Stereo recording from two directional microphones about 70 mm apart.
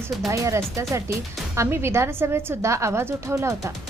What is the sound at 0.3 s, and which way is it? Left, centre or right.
A woman's voice, right.